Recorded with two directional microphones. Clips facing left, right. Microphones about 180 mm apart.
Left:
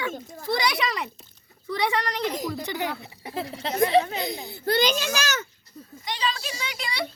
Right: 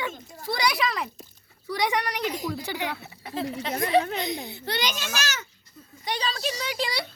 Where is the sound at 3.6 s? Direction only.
30° left (ahead or behind).